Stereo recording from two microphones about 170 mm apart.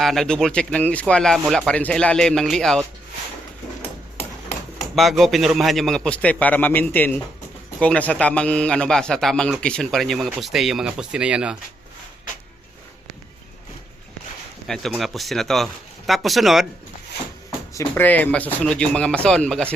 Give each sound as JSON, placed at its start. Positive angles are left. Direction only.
{"t": 0.0, "sound": "speech", "side_deg": 0}
{"t": 4.2, "sound": "a sound", "side_deg": 40}
{"t": 4.9, "sound": "speech", "side_deg": 0}
{"t": 14.7, "sound": "speech", "side_deg": 0}
{"t": 17.7, "sound": "speech", "side_deg": 10}